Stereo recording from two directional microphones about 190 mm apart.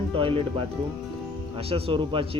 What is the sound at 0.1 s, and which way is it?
Speech, 30° right (ahead or behind).